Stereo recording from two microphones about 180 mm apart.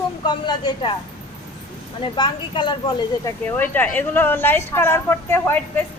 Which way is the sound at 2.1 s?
25° left (ahead or behind).